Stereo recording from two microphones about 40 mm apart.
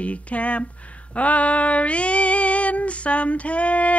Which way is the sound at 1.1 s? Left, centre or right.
Left.